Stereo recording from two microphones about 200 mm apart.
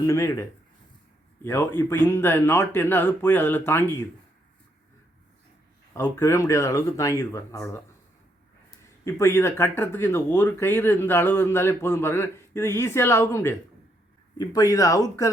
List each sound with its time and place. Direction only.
0.0 s speech: 15° left (ahead or behind)
1.5 s speech: 10° left (ahead or behind)
5.9 s speech: 15° left (ahead or behind)
9.0 s speech: 15° left (ahead or behind)